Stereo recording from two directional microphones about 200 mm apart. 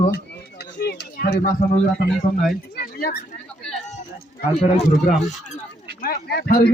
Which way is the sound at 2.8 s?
45° left (ahead or behind).